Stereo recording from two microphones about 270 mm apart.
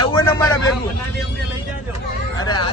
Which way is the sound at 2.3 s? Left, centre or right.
Centre.